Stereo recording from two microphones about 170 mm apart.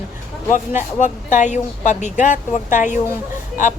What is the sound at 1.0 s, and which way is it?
Speech, 45° left (ahead or behind).